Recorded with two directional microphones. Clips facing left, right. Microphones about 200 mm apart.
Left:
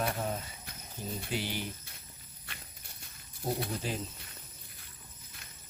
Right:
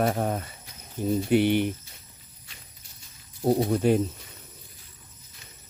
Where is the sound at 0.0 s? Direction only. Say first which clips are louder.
Right 8 dB; 60° right (ahead or behind).